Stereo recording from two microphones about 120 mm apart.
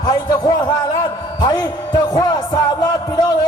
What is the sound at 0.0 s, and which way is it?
Speech, 35° left (ahead or behind).